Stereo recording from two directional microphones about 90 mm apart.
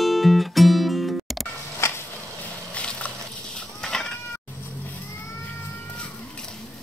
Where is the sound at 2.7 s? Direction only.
15° left (ahead or behind).